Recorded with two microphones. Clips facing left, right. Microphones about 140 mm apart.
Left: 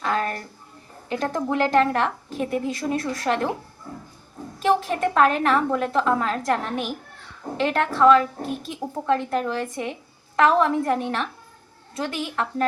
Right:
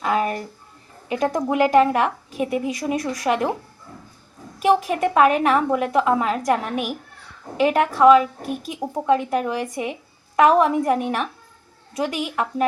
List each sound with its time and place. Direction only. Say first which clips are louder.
0.0 s a sound: right 3 dB; 10° right (ahead or behind)
1.0 s a woman's voice: right 3 dB; 10° right (ahead or behind)
4.6 s a woman's voice: right 3 dB; 10° right (ahead or behind)